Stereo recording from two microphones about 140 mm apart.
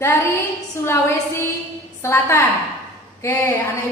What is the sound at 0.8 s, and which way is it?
A woman's voice, 20° left (ahead or behind).